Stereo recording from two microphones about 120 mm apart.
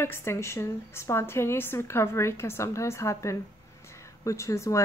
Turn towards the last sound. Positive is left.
turn(degrees=25)  # may be behind; listen again after turning